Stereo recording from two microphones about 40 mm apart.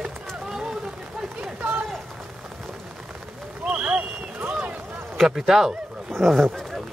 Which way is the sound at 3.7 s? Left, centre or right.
Right.